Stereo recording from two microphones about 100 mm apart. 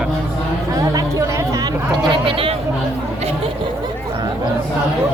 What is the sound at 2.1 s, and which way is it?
Speech, 60° right (ahead or behind).